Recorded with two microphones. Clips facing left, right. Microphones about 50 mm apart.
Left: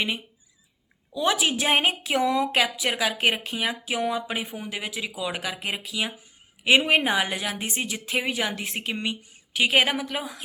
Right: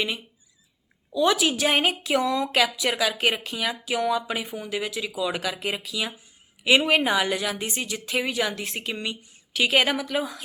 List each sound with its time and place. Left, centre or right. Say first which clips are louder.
1.1 s a woman's voice: right 2 dB; left